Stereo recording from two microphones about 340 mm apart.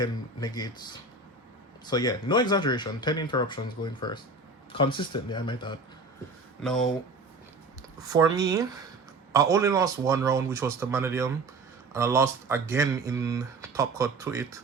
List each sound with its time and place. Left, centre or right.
0.0 s speech: centre
1.9 s speech: centre
6.6 s speech: centre
8.0 s speech: centre